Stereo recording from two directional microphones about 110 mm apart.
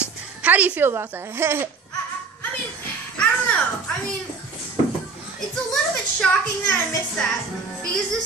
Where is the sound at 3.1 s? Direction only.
10° left (ahead or behind).